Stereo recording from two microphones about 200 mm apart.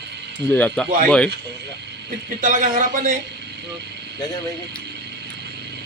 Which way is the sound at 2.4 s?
40° right (ahead or behind).